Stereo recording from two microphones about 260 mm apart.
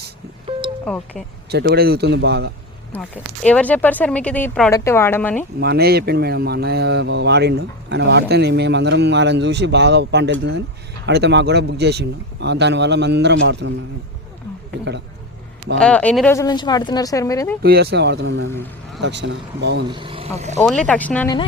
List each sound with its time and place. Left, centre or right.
0.9 s speech: centre
1.5 s speech: right
2.9 s speech: centre
5.5 s speech: right
15.8 s speech: centre
17.6 s speech: right
19.9 s speech: centre
20.6 s speech: centre